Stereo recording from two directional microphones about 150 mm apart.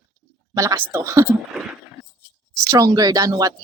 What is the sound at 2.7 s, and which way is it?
Speech, 25° right (ahead or behind).